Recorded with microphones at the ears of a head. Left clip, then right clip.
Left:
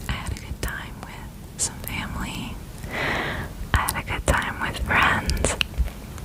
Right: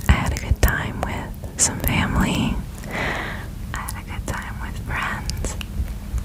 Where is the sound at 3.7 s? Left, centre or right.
Left.